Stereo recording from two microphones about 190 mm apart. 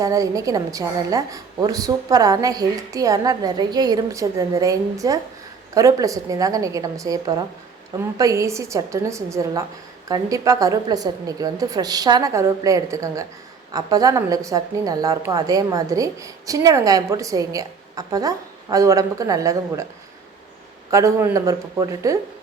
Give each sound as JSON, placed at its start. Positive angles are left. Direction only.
{"t": 0.0, "sound": "a woman's voice", "side_deg": -15}
{"t": 20.9, "sound": "a woman's voice", "side_deg": -15}